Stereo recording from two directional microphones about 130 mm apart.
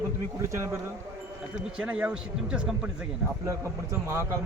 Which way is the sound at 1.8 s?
10° right (ahead or behind).